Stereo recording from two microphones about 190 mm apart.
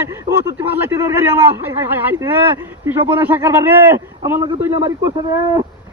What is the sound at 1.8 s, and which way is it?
A man's voice, 10° right (ahead or behind).